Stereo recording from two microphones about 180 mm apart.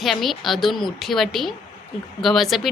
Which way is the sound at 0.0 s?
Centre (ahead or behind).